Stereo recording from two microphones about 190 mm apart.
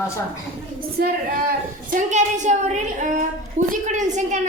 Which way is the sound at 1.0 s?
55° right (ahead or behind).